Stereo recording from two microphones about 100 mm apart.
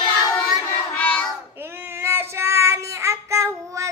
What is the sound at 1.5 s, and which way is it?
Child singing, 20° right (ahead or behind).